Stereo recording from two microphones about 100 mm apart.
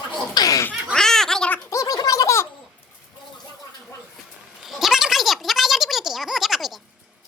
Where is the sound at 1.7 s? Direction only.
35° left (ahead or behind).